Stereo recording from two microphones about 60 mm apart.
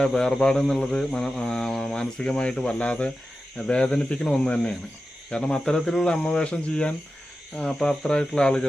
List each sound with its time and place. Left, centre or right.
0.0 s mantra: centre